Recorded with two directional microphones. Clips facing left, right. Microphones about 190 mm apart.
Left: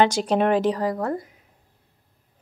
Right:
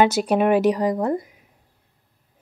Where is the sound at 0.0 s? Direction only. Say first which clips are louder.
Right 2 dB; 10° right (ahead or behind).